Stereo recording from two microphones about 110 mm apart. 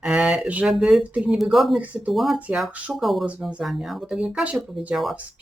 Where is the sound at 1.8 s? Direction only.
15° right (ahead or behind).